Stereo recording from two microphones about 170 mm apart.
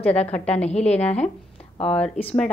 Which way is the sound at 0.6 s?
40° left (ahead or behind).